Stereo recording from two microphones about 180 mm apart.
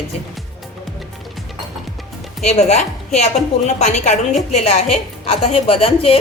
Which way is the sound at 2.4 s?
40° left (ahead or behind).